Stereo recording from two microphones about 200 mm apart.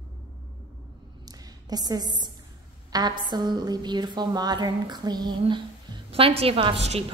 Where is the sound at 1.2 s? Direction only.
20° right (ahead or behind).